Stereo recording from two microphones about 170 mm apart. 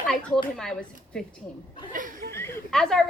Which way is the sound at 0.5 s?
5° left (ahead or behind).